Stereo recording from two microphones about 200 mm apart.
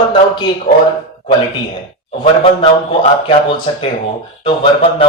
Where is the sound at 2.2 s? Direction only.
25° left (ahead or behind).